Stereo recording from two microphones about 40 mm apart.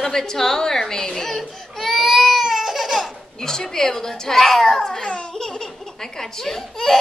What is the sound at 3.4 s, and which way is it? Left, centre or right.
A woman's voice, centre.